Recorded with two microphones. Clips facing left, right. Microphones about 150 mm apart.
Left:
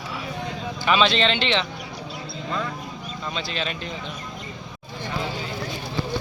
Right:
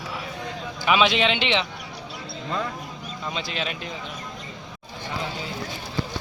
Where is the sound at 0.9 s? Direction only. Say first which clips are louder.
Even; 10° right (ahead or behind).